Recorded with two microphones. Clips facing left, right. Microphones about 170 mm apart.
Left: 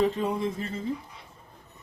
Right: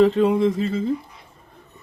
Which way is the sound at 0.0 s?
80° right.